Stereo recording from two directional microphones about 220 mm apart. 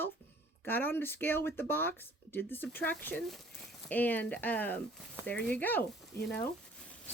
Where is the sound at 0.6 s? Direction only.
10° left (ahead or behind).